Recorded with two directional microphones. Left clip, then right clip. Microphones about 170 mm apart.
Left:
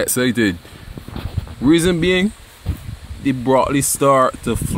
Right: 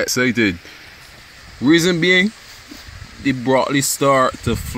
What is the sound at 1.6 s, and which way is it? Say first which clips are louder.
Speech: right 1 dB; 5° left (ahead or behind).